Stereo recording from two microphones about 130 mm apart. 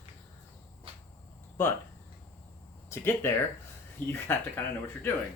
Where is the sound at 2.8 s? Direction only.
20° left (ahead or behind).